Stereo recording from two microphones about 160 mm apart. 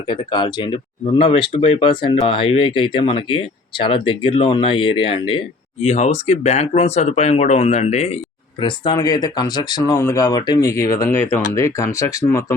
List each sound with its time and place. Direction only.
0.1 s speech: 30° left (ahead or behind)
8.6 s speech: 30° left (ahead or behind)